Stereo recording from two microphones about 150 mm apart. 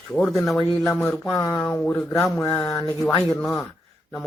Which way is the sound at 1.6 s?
5° left (ahead or behind).